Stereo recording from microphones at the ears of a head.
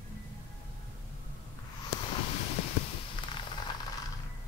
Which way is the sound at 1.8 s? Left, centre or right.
Left.